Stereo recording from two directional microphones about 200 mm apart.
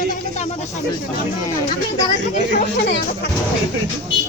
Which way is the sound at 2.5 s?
45° left (ahead or behind).